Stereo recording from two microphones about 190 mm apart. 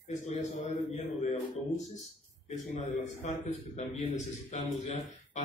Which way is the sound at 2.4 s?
40° left (ahead or behind).